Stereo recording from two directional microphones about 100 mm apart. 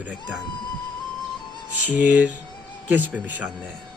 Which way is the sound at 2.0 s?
15° right (ahead or behind).